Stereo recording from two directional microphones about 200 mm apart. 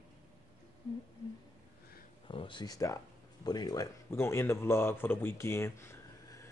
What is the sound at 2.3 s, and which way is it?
Speech, 25° left (ahead or behind).